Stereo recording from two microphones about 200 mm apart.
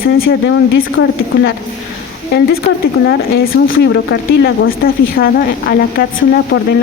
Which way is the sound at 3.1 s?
50° left (ahead or behind).